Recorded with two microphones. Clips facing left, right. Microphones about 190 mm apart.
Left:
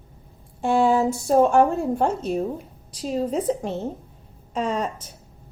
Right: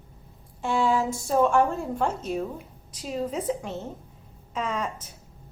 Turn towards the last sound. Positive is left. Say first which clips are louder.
# left 5 dB
turn(degrees=30)  # may be behind; listen again after turning